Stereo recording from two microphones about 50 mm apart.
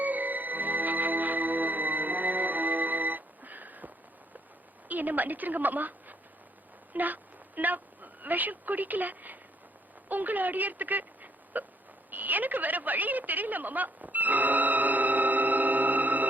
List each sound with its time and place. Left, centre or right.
0.0 s music: right
4.9 s a woman's voice: right
12.1 s a sound: right